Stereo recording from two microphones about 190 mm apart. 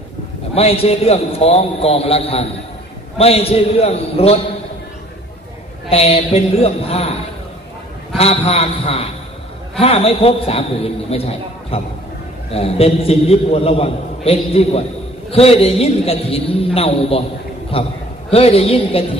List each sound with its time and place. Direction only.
0.6 s a man's voice: 30° left (ahead or behind)
5.9 s a man's voice: 30° left (ahead or behind)
8.2 s a man's voice: 35° left (ahead or behind)